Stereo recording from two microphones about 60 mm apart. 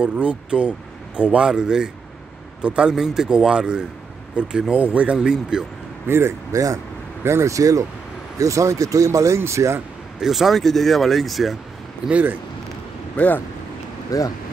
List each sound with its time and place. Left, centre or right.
0.0 s speech: right
5.1 s speech: centre
6.0 s speech: right
6.5 s speech: right
7.2 s speech: right
10.2 s speech: centre
12.1 s speech: right
13.1 s speech: left
14.1 s speech: left